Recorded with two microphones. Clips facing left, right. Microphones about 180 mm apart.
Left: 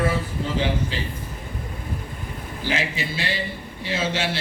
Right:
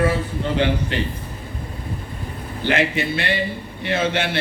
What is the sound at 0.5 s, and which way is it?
Speech, 65° right (ahead or behind).